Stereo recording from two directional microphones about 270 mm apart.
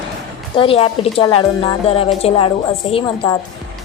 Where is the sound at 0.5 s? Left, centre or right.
Centre.